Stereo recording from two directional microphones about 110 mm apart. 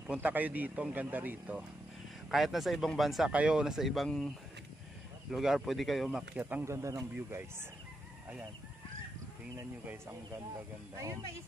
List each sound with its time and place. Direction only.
0.0 s speech: 15° right (ahead or behind)
2.3 s speech: centre (ahead or behind)
5.3 s speech: 5° right (ahead or behind)
6.0 s speech: 10° right (ahead or behind)
6.6 s speech: 25° right (ahead or behind)